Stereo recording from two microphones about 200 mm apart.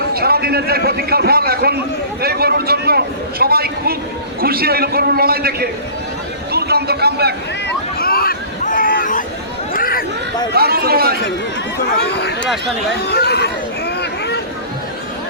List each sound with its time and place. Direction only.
0.1 s a man's voice: 50° right (ahead or behind)
7.9 s a sound: 50° left (ahead or behind)
10.5 s a man's voice: 50° right (ahead or behind)
11.9 s speech: 55° left (ahead or behind)
13.1 s chatter: 55° left (ahead or behind)